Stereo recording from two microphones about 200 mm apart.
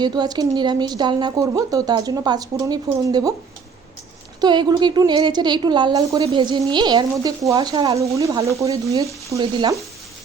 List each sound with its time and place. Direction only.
0.0 s speech: 20° right (ahead or behind)
4.4 s speech: 20° right (ahead or behind)
8.7 s stir: 15° right (ahead or behind)
9.3 s speech: 20° right (ahead or behind)